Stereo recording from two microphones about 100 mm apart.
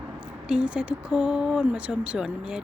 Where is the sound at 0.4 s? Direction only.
10° right (ahead or behind).